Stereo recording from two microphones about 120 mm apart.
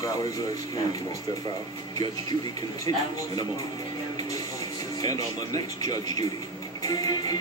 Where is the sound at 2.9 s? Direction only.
50° right (ahead or behind).